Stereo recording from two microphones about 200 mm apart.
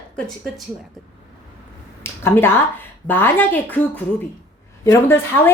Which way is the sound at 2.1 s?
10° left (ahead or behind).